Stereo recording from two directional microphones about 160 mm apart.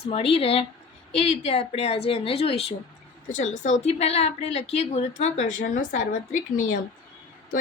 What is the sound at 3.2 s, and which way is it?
A woman's voice, 50° left (ahead or behind).